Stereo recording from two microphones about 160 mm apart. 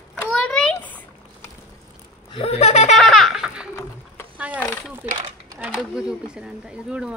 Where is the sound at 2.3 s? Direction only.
40° left (ahead or behind).